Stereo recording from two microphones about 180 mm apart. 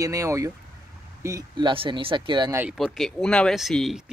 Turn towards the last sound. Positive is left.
turn(degrees=0)  # may be behind; listen again after turning